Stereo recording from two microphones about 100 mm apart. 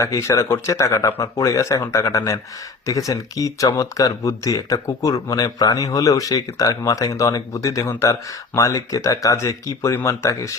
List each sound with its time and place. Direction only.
0.0 s speech: 30° left (ahead or behind)